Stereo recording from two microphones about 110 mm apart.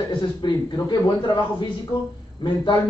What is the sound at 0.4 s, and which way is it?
Speech, 45° left (ahead or behind).